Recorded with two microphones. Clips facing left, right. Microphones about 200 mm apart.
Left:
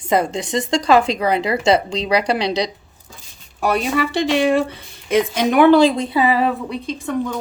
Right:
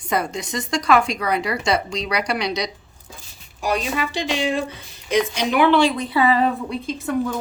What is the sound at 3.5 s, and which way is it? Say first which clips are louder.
Speech: left 4 dB; 60° left (ahead or behind).